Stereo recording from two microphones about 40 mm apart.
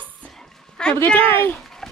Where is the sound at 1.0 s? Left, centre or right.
Left.